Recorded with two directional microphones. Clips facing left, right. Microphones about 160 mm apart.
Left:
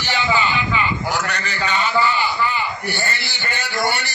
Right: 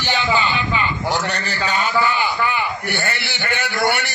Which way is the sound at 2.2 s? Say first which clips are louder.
Right 1 dB; 55° right (ahead or behind).